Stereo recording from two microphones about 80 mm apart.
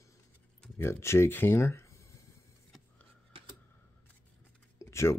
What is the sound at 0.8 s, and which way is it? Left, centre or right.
Speech, left.